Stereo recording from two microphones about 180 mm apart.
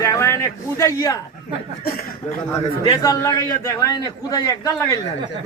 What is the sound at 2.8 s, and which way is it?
A man's voice, 25° left (ahead or behind).